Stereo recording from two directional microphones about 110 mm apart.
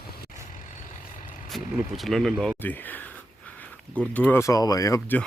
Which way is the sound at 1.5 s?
Centre (ahead or behind).